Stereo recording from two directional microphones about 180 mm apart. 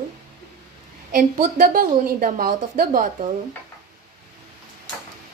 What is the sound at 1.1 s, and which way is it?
Speech, 50° right (ahead or behind).